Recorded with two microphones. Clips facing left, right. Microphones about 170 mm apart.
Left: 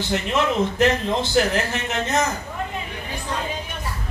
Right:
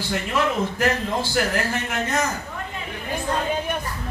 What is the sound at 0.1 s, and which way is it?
A man's voice, 25° left (ahead or behind).